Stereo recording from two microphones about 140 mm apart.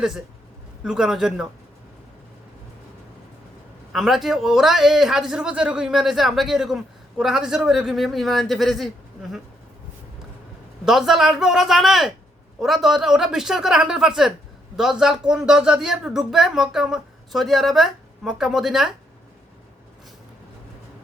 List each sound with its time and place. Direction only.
0.9 s a man's voice: 5° right (ahead or behind)
3.9 s a man's voice: centre (ahead or behind)
10.8 s a man's voice: 5° right (ahead or behind)